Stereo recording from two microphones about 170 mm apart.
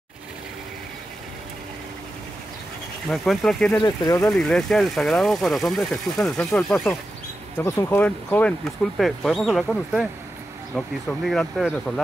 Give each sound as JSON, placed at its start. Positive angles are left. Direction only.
{"t": 3.1, "sound": "speech", "side_deg": 0}
{"t": 3.8, "sound": "speech", "side_deg": 25}
{"t": 4.2, "sound": "speech", "side_deg": 5}